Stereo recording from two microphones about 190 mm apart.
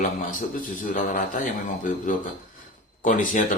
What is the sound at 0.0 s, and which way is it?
A man's voice, 45° left (ahead or behind).